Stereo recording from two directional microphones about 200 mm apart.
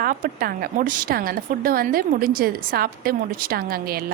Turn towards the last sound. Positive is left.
turn(degrees=-45)  # may be behind; listen again after turning